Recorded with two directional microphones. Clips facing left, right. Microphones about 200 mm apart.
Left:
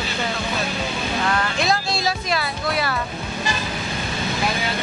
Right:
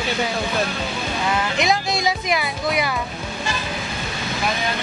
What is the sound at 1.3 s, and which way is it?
Speech, 15° right (ahead or behind).